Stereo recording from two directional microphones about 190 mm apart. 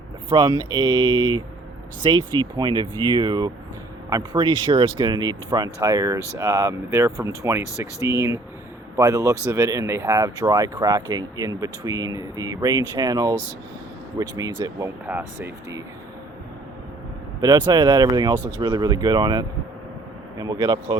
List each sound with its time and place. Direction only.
0.3 s speech: 25° right (ahead or behind)
13.2 s speech: 10° left (ahead or behind)
14.2 s speech: 20° right (ahead or behind)
17.7 s speech: 20° right (ahead or behind)
18.3 s speech: 10° left (ahead or behind)
18.6 s speech: 20° right (ahead or behind)